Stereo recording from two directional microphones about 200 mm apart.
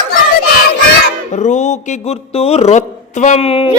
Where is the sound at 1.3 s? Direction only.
35° left (ahead or behind).